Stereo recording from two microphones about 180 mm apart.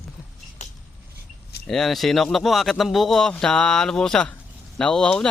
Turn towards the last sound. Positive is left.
turn(degrees=5)  # may be behind; listen again after turning